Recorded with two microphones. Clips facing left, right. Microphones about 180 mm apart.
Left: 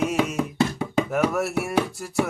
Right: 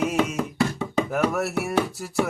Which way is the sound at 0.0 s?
Centre (ahead or behind).